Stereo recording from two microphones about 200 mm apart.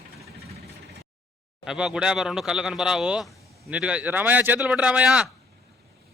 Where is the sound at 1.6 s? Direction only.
5° right (ahead or behind).